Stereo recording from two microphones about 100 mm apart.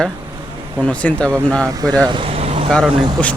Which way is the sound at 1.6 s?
40° right (ahead or behind).